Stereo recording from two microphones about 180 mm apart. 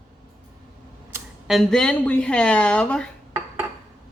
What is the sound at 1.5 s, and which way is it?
Speech, centre (ahead or behind).